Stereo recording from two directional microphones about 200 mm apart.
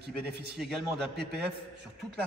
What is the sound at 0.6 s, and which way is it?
Speech, centre (ahead or behind).